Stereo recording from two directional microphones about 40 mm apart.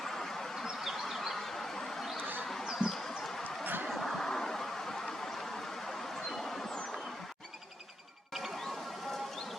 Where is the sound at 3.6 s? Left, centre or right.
Right.